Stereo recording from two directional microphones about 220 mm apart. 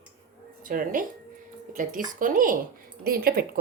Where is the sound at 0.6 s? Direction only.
40° right (ahead or behind).